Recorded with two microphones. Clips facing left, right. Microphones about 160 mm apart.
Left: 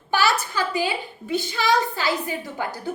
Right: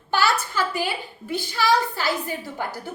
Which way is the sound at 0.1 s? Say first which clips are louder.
Left 1 dB; 15° left (ahead or behind).